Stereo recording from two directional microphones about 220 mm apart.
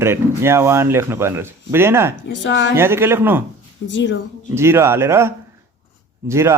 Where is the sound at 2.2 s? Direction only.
55° left (ahead or behind).